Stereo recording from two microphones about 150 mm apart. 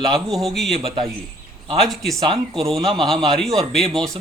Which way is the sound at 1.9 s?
Centre (ahead or behind).